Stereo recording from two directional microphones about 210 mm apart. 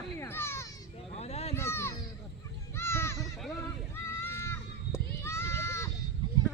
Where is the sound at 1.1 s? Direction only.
30° left (ahead or behind).